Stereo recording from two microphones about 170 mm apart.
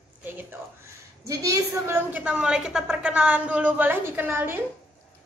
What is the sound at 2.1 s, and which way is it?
A woman's voice, 5° right (ahead or behind).